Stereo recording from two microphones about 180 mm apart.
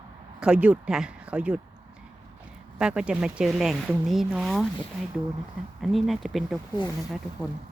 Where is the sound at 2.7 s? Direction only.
5° right (ahead or behind).